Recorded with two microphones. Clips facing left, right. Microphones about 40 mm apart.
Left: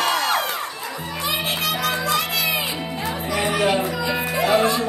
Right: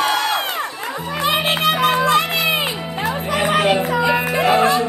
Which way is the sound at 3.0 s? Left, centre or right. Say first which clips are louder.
Right 5 dB; right.